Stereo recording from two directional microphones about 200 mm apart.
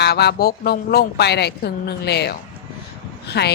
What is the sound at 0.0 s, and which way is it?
Speech, 55° left (ahead or behind).